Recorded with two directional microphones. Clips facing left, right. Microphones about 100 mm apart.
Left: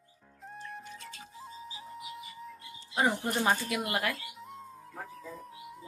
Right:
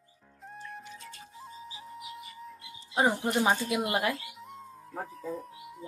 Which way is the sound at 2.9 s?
20° right (ahead or behind).